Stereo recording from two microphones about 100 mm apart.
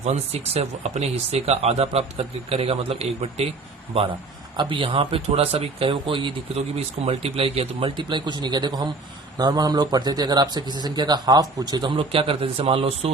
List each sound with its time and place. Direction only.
0.0 s speech: 90° right
4.5 s a man's voice: 55° right (ahead or behind); by 13.1 s 80° right